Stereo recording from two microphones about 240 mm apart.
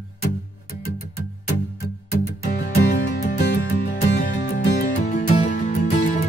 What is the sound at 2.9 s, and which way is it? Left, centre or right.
Music, left.